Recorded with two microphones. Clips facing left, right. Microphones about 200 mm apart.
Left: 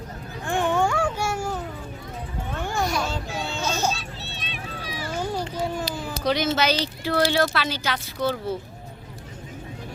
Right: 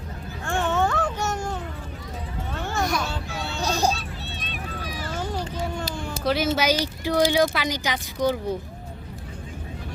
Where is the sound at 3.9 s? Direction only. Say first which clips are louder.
Right 1 dB; 50° right (ahead or behind).